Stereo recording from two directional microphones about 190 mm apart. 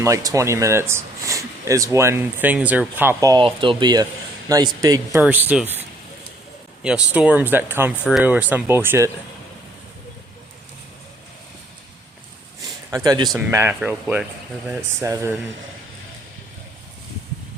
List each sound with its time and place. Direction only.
0.0 s a man's voice: 15° right (ahead or behind)
5.2 s speech: 10° right (ahead or behind)
6.8 s speech: 5° right (ahead or behind)
12.6 s a sound: 20° right (ahead or behind)
13.2 s speech: centre (ahead or behind)